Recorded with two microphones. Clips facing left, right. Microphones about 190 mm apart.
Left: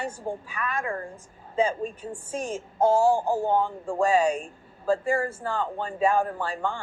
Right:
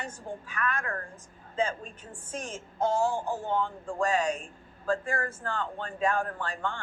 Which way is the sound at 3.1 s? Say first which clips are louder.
Left 8 dB; 35° left (ahead or behind).